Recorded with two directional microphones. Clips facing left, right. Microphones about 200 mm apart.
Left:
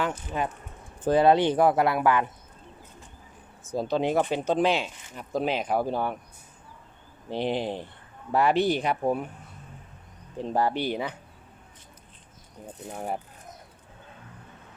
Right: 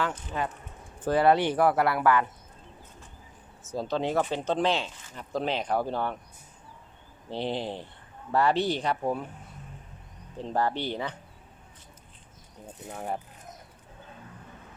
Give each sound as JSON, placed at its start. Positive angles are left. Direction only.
{"t": 0.0, "sound": "speech", "side_deg": 15}
{"t": 3.7, "sound": "speech", "side_deg": 15}
{"t": 7.3, "sound": "speech", "side_deg": 15}
{"t": 10.3, "sound": "speech", "side_deg": 15}